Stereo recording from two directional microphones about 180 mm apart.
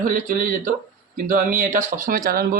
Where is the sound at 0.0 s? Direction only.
50° right (ahead or behind).